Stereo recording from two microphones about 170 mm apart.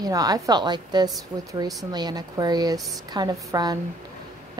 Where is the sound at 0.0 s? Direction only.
20° right (ahead or behind).